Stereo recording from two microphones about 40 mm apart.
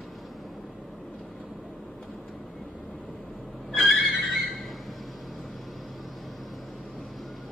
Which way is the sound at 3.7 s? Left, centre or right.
Centre.